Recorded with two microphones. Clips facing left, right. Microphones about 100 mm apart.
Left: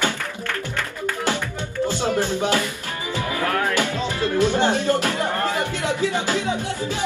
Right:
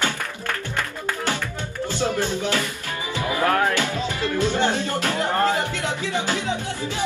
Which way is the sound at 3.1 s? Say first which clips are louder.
Right 2 dB; 25° right (ahead or behind).